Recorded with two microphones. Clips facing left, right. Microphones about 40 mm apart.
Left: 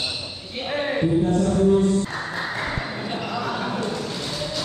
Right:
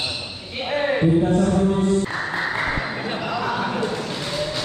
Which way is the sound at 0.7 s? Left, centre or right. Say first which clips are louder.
Right 3 dB; centre.